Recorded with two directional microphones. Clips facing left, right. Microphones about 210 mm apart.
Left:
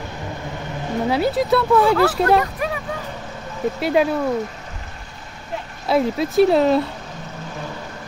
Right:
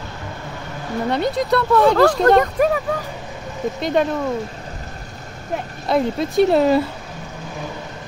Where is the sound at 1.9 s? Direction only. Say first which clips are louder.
Right 3 dB; 40° right (ahead or behind).